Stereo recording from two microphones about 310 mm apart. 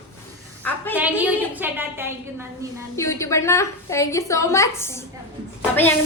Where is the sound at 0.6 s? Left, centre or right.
Centre.